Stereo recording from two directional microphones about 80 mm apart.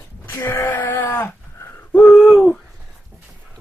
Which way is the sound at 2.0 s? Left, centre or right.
Centre.